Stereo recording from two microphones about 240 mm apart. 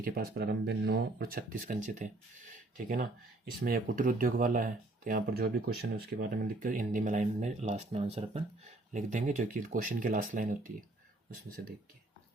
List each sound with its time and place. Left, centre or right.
0.0 s speech: right
3.6 s speech: right